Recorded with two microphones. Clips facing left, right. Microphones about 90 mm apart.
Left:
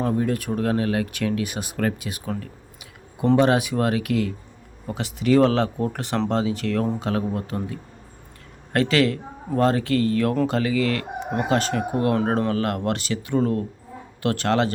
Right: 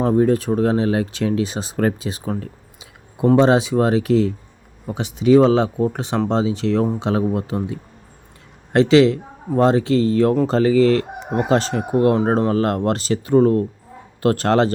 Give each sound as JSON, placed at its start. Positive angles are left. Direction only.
{"t": 0.0, "sound": "speech", "side_deg": -30}